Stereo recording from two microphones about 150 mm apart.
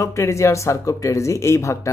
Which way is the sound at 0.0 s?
20° left (ahead or behind).